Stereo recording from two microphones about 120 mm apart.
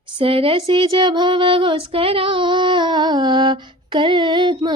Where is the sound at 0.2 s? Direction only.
50° right (ahead or behind).